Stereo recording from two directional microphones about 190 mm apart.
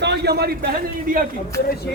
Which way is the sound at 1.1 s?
45° right (ahead or behind).